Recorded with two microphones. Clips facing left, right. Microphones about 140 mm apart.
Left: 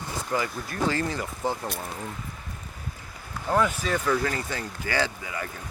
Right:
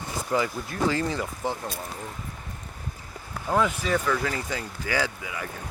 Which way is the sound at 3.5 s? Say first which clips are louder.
Even; 10° right (ahead or behind).